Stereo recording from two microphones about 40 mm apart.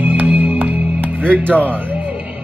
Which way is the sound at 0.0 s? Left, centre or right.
Right.